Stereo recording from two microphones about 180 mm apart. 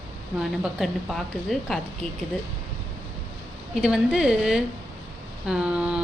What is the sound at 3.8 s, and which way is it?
A woman's voice, 5° right (ahead or behind).